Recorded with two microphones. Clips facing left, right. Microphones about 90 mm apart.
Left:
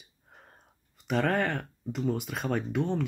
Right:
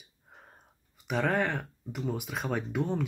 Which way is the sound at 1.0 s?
5° right (ahead or behind).